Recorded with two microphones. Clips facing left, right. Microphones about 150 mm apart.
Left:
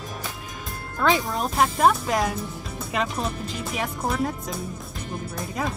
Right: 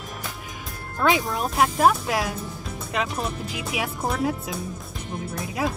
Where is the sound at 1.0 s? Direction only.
Centre (ahead or behind).